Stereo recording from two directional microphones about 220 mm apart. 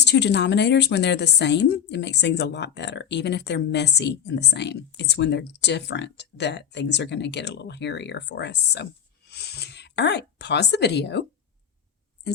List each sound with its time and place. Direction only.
0.0 s a woman's voice: 50° left (ahead or behind)